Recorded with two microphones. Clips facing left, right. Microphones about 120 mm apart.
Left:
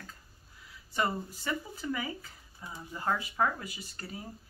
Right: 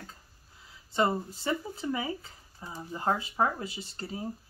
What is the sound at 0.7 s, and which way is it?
Speech, 25° right (ahead or behind).